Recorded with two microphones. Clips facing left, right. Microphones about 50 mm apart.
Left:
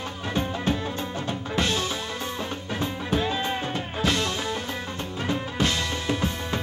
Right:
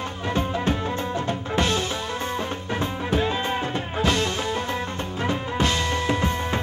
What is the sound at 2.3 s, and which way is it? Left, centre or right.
Music, centre.